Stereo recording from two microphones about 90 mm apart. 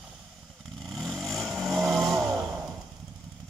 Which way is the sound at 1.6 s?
Centre (ahead or behind).